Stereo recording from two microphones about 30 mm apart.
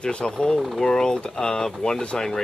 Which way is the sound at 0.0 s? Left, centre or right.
Left.